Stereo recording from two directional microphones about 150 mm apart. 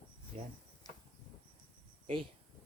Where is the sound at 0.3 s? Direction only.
45° right (ahead or behind).